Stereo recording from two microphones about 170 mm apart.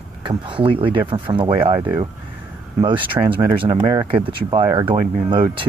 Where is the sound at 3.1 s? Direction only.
30° right (ahead or behind).